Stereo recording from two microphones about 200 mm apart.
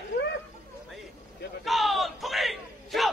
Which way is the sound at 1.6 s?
Centre (ahead or behind).